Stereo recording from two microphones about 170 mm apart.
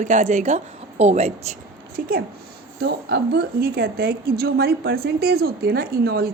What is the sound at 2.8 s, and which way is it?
A woman's voice, 75° right (ahead or behind).